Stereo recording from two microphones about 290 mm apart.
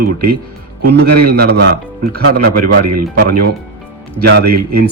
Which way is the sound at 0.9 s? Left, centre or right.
Right.